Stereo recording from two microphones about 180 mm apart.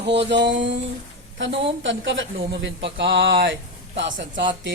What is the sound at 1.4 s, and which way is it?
Speech, 90° right.